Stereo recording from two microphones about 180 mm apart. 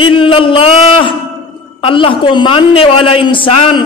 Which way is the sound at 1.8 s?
30° left (ahead or behind).